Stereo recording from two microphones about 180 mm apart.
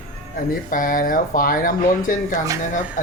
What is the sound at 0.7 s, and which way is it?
Speech, 50° left (ahead or behind).